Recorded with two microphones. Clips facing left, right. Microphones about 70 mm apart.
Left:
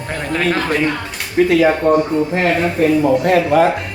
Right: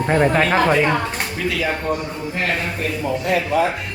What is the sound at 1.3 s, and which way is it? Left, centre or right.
Speech, left.